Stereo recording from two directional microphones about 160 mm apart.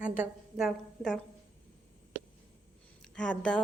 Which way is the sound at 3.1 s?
5° left (ahead or behind).